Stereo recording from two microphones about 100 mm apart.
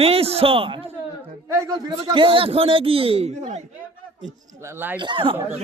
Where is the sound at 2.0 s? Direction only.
60° right (ahead or behind); by 3.6 s 90° right.